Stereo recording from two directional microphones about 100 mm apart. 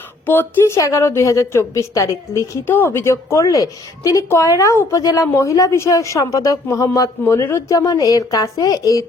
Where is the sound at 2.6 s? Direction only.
20° left (ahead or behind).